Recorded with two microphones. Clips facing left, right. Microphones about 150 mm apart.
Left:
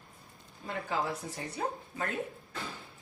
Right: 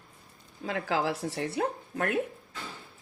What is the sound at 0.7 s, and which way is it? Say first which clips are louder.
Speech: right 5 dB; 90° right.